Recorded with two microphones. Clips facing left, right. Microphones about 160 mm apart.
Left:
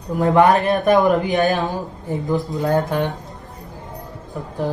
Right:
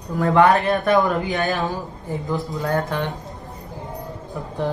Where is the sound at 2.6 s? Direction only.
15° left (ahead or behind).